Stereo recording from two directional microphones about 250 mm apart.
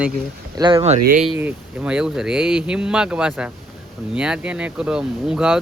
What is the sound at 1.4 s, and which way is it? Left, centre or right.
Speech, centre.